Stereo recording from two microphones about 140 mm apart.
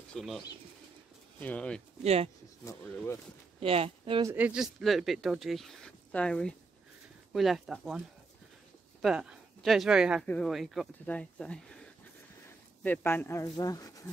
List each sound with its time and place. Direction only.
0.1 s speech: centre (ahead or behind)
1.4 s speech: 10° left (ahead or behind)
3.5 s speech: 40° right (ahead or behind)
4.4 s speech: 5° right (ahead or behind)
9.0 s speech: 5° right (ahead or behind)
10.2 s speech: 10° left (ahead or behind)
10.5 s speech: centre (ahead or behind)
12.8 s speech: 15° left (ahead or behind)